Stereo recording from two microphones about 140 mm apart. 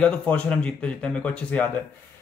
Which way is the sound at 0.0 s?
5° left (ahead or behind).